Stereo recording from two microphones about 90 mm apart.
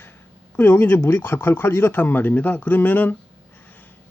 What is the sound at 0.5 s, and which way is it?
Speech, 25° left (ahead or behind).